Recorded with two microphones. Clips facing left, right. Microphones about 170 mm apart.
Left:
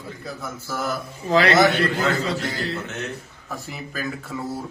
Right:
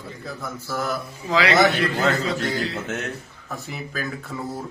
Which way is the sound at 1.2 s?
55° left (ahead or behind).